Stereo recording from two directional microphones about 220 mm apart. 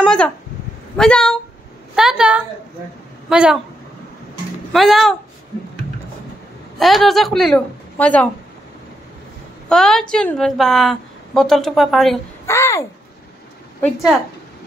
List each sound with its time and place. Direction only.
0.0 s a sound: 5° left (ahead or behind)
0.9 s a woman's voice: 5° left (ahead or behind)
4.7 s a woman's voice: centre (ahead or behind)
6.8 s a woman's voice: centre (ahead or behind)
9.7 s a woman's voice: centre (ahead or behind)
12.4 s a child's voice: 10° left (ahead or behind)